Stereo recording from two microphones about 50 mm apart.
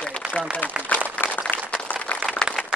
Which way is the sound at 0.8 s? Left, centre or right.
Left.